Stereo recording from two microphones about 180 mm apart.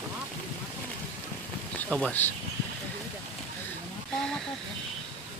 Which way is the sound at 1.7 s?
10° left (ahead or behind).